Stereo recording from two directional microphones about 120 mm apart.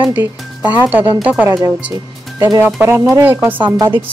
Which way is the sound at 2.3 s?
25° right (ahead or behind).